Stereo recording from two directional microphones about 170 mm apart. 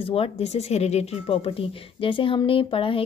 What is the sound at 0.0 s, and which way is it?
Speech, 35° left (ahead or behind).